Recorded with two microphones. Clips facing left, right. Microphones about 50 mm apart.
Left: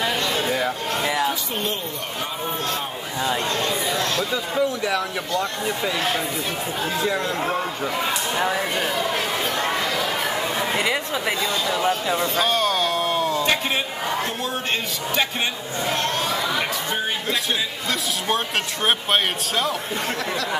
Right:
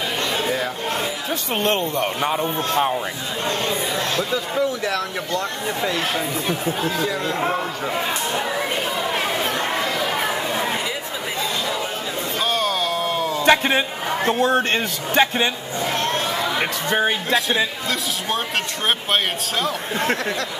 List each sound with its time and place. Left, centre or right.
4.3 s speech: centre
10.8 s chatter: left
12.4 s a sound: centre
13.5 s a man's voice: right
16.9 s speech: right
18.9 s speech: centre